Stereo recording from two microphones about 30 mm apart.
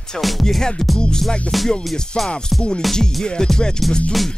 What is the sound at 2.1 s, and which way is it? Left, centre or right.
Music, left.